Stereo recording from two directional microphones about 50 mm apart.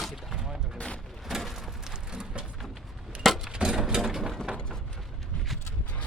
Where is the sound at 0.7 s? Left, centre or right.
Left.